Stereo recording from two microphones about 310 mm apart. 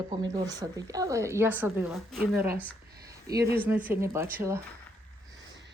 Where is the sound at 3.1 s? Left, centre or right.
Centre.